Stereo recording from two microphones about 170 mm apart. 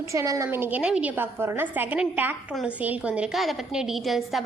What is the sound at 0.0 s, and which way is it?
A woman's voice, 15° right (ahead or behind).